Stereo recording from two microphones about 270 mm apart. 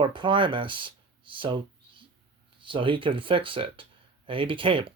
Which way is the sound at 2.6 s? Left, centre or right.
Centre.